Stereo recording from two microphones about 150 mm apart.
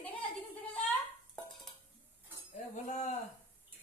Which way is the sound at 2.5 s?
55° left (ahead or behind).